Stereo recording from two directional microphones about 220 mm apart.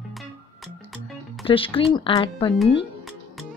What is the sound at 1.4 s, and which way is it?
Speech, 25° left (ahead or behind).